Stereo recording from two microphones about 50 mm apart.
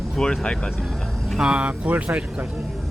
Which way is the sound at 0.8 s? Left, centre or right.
Centre.